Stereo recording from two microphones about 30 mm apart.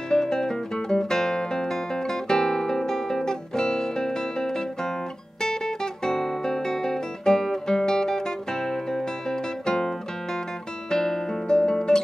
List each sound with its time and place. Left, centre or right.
0.1 s music: left
6.0 s guitar: centre